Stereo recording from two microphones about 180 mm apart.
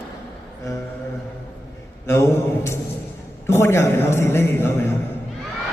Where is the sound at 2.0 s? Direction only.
15° left (ahead or behind).